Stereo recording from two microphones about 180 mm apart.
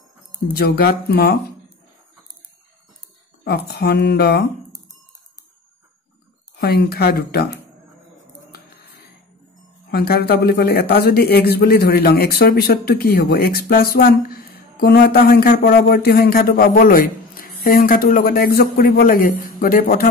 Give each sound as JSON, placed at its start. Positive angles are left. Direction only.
{"t": 0.5, "sound": "speech", "side_deg": 60}
{"t": 3.4, "sound": "speech", "side_deg": 60}
{"t": 6.6, "sound": "speech", "side_deg": 60}
{"t": 8.5, "sound": "a sound", "side_deg": 60}
{"t": 9.8, "sound": "speech", "side_deg": 60}